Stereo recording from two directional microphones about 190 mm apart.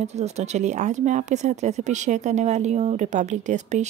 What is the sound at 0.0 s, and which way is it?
Speech, 35° right (ahead or behind).